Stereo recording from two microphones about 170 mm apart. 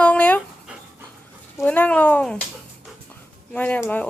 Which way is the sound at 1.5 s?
10° left (ahead or behind).